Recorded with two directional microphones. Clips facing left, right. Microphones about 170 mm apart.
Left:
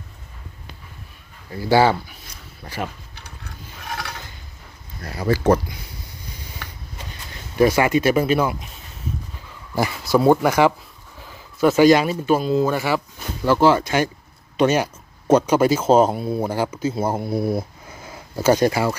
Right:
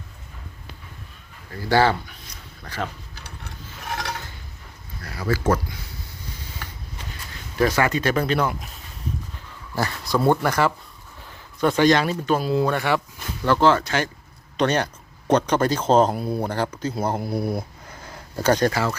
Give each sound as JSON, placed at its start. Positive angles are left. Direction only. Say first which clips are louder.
{"t": 1.5, "sound": "speech", "louder": "left 3 dB", "side_deg": 10}
{"t": 7.6, "sound": "speech", "louder": "left 4 dB", "side_deg": 15}
{"t": 9.7, "sound": "speech", "louder": "left 5 dB", "side_deg": 10}
{"t": 12.4, "sound": "speech", "louder": "left 2 dB", "side_deg": -5}
{"t": 17.8, "sound": "a sound", "louder": "left 2 dB", "side_deg": 10}